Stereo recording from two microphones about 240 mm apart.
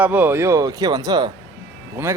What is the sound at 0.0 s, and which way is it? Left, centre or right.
Speech, centre.